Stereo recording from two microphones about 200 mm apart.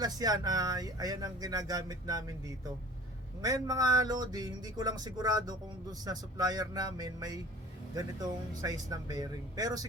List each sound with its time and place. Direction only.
0.0 s speech: 20° right (ahead or behind)